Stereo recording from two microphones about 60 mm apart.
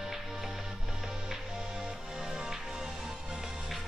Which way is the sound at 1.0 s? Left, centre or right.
Centre.